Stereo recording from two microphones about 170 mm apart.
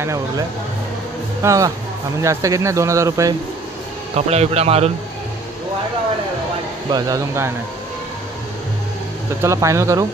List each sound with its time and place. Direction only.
1.4 s speech: 20° right (ahead or behind)
4.1 s a man's voice: 35° right (ahead or behind)
6.9 s speech: 20° right (ahead or behind)
9.4 s speech: 15° right (ahead or behind)